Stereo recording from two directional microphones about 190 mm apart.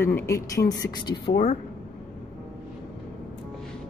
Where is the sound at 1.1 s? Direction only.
60° left (ahead or behind).